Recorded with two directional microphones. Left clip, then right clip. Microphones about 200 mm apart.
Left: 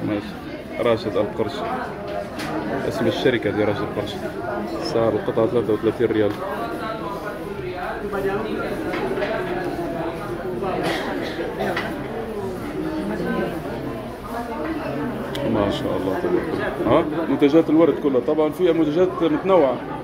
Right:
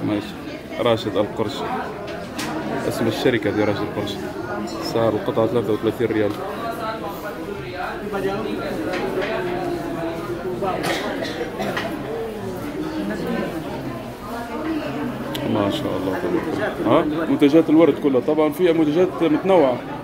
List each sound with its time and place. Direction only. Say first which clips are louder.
0.8 s speech: right 1 dB; 15° right (ahead or behind)
3.1 s speech: even; 15° right (ahead or behind)
4.9 s speech: even; 15° right (ahead or behind)
16.9 s speech: right 1 dB; 20° right (ahead or behind)